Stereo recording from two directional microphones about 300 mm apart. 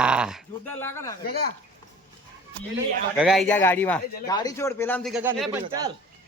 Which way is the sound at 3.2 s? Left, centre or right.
Centre.